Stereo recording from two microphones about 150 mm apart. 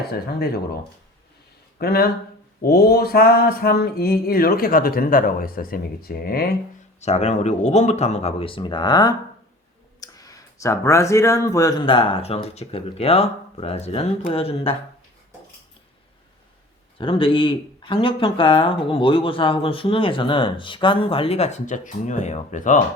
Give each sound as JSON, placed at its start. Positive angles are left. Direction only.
{"t": 0.1, "sound": "speech", "side_deg": 90}
{"t": 1.8, "sound": "speech", "side_deg": 90}
{"t": 2.6, "sound": "mantra", "side_deg": 90}
{"t": 7.0, "sound": "speech", "side_deg": 45}
{"t": 11.8, "sound": "speech", "side_deg": 35}
{"t": 17.0, "sound": "speech", "side_deg": 35}